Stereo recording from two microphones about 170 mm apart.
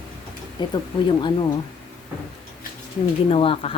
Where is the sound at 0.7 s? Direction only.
30° left (ahead or behind).